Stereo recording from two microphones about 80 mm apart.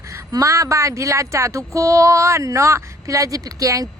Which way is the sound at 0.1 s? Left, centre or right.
Right.